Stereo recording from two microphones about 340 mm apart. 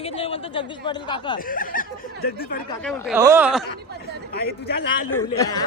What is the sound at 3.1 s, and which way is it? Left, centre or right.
Speech, centre.